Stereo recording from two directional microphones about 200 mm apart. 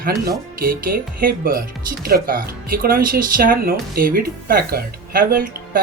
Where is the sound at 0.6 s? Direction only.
45° right (ahead or behind).